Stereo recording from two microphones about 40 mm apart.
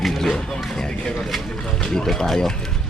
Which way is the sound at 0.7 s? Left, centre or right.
Centre.